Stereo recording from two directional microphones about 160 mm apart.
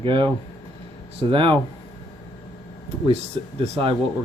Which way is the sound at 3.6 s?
35° right (ahead or behind).